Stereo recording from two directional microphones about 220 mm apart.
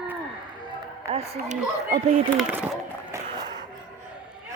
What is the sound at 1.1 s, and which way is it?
Speech, 30° right (ahead or behind).